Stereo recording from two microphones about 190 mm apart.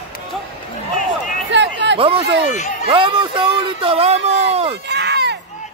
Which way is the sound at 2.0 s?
30° right (ahead or behind).